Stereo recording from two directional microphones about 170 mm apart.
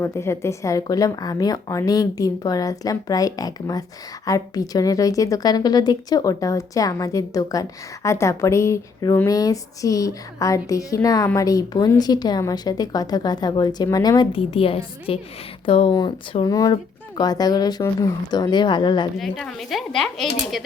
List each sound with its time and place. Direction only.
0.0 s a woman's voice: 15° left (ahead or behind)
19.1 s speech: centre (ahead or behind)